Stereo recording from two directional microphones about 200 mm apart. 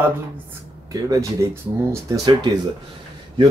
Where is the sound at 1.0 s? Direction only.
15° right (ahead or behind).